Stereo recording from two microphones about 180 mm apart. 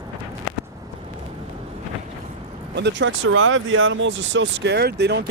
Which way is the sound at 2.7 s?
80° right.